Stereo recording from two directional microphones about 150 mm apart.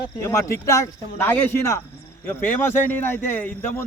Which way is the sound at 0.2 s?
20° left (ahead or behind).